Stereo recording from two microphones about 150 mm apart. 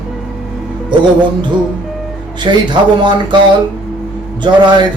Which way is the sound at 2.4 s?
30° right (ahead or behind).